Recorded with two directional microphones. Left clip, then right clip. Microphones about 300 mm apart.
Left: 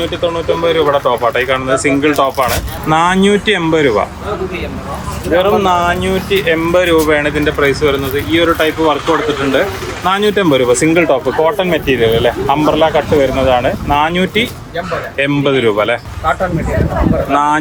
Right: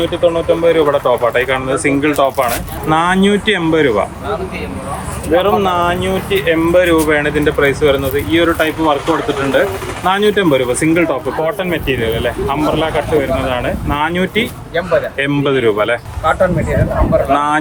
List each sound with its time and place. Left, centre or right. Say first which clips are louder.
0.0 s speech: right 2 dB; centre
5.3 s speech: left 2 dB; centre
9.0 s speech: left 2 dB; centre
9.4 s speech: even; centre